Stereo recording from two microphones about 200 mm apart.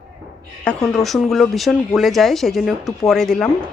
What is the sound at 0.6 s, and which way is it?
Speech, 5° left (ahead or behind).